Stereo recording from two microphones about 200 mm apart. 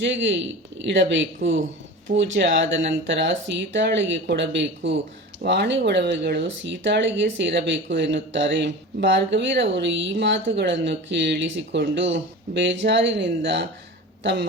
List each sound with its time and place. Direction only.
0.0 s speech: 65° right (ahead or behind)